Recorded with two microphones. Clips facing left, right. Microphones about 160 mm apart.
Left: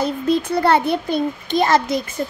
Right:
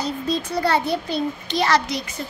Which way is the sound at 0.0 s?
55° left (ahead or behind).